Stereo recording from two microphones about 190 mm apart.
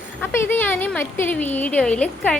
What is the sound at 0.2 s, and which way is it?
A woman's voice, 10° left (ahead or behind).